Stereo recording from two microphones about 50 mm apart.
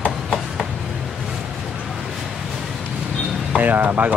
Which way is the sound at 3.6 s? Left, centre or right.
Right.